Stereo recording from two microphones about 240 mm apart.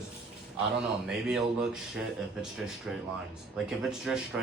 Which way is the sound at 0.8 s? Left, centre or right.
Centre.